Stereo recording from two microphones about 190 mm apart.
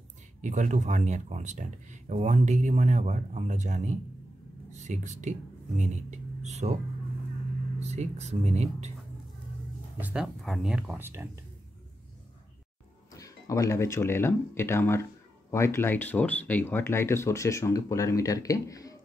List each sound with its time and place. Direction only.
0.4 s speech: 40° right (ahead or behind)
7.8 s speech: 35° right (ahead or behind)
9.9 s speech: 5° right (ahead or behind)
13.1 s speech: 15° left (ahead or behind)